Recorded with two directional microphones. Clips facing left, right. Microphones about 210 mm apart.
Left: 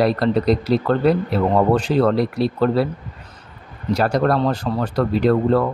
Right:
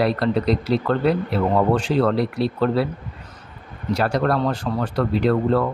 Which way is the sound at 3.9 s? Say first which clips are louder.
Left 2 dB; 40° left (ahead or behind).